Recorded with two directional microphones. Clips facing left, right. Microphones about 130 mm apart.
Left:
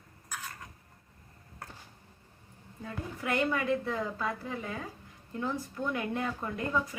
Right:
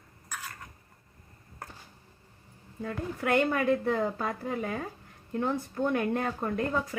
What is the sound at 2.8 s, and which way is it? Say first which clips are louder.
A woman's voice: right 6 dB; 55° right (ahead or behind).